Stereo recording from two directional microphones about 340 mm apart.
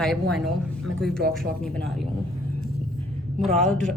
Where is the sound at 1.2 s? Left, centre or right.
Right.